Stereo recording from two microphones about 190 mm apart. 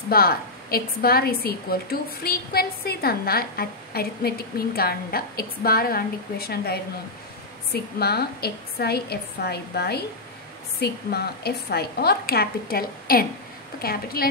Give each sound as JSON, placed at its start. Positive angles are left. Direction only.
{"t": 0.1, "sound": "a woman's voice", "side_deg": 55}